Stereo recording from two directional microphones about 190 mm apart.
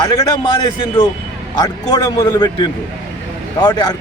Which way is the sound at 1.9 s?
25° left (ahead or behind).